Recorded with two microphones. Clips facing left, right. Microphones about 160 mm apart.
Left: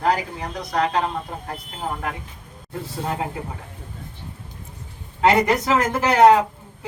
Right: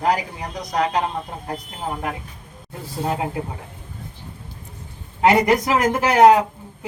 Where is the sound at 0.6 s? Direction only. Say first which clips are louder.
Right 1 dB; 20° right (ahead or behind).